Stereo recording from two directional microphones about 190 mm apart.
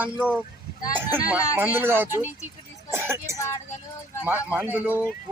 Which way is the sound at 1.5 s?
10° right (ahead or behind).